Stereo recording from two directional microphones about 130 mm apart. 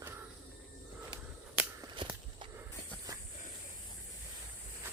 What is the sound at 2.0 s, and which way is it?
Walk, 40° right (ahead or behind).